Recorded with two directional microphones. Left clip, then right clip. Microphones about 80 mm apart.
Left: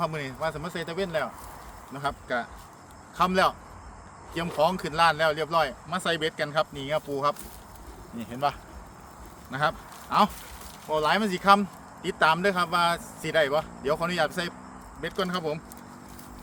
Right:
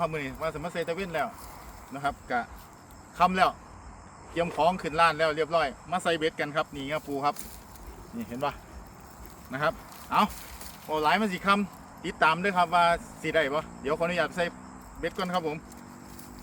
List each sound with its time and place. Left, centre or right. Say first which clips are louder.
0.0 s speech: left 1 dB; left
10.8 s speech: left 1 dB; centre
11.1 s speech: left 6 dB; left